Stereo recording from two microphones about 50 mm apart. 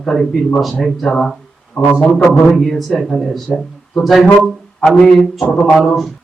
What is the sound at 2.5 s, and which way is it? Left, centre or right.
Speech, centre.